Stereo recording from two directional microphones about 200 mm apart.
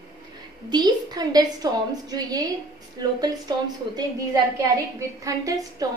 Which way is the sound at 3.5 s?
20° right (ahead or behind).